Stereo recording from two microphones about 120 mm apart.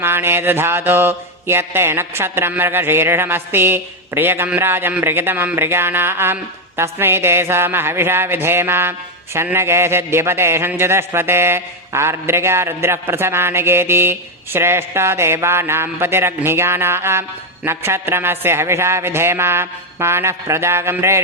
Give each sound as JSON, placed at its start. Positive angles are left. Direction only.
{"t": 0.0, "sound": "speech", "side_deg": -20}